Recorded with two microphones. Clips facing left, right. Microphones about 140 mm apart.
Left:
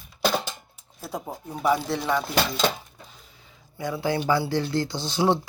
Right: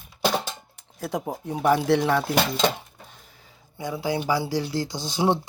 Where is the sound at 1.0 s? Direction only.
85° right.